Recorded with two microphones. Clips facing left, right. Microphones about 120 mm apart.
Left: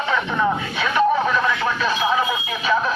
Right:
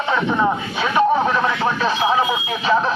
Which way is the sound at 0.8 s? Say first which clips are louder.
Right 2 dB; 25° right (ahead or behind).